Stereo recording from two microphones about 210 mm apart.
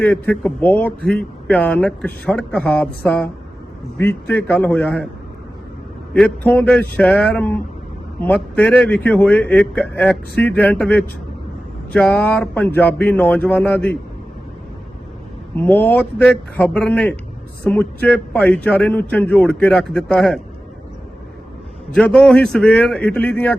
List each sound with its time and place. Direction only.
0.0 s speech: 5° left (ahead or behind)
6.1 s speech: 5° left (ahead or behind)
15.5 s speech: 10° left (ahead or behind)
21.9 s a man's voice: 5° left (ahead or behind)